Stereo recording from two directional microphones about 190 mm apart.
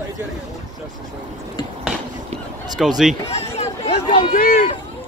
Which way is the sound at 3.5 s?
30° left (ahead or behind).